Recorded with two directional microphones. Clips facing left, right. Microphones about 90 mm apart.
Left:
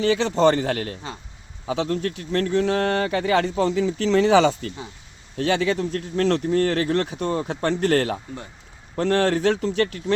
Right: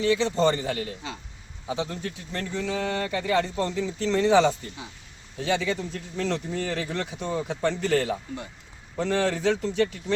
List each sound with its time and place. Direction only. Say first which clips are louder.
0.0 s a man's voice: left 4 dB; 65° left (ahead or behind)
1.6 s a man's voice: left 6 dB; 85° left
5.4 s speech: left 5 dB; 70° left (ahead or behind)